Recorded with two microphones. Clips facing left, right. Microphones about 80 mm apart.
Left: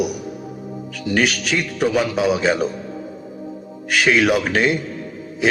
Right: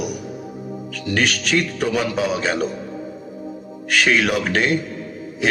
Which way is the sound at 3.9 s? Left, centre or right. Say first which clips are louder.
Left 2 dB; centre.